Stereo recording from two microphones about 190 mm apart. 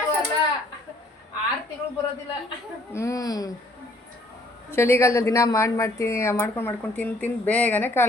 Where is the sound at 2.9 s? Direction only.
15° left (ahead or behind).